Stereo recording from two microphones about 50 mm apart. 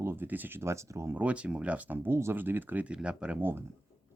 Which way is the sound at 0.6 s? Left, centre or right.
Right.